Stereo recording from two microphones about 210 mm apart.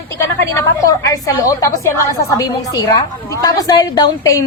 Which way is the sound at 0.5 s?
15° left (ahead or behind).